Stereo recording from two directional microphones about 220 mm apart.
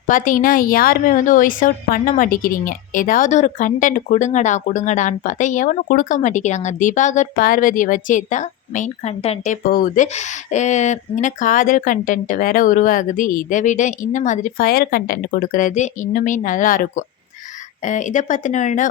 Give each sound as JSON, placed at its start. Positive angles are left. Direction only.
{"t": 0.1, "sound": "a woman's voice", "side_deg": 35}